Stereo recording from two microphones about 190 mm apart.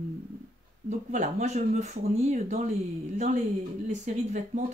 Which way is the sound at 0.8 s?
40° right (ahead or behind).